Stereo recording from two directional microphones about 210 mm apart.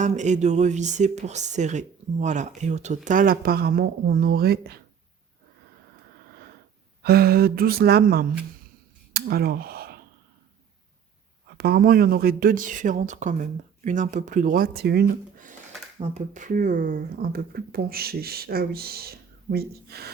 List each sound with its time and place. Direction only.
0.0 s speech: 35° right (ahead or behind)
7.0 s speech: 45° right (ahead or behind)
9.1 s a sound: 50° right (ahead or behind)
11.5 s speech: 45° right (ahead or behind)